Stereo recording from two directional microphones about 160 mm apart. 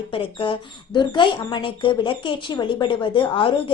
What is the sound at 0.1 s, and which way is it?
Speech, 35° left (ahead or behind).